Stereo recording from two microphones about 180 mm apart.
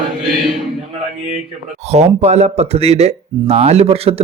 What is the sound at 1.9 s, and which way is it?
Speech, 35° right (ahead or behind).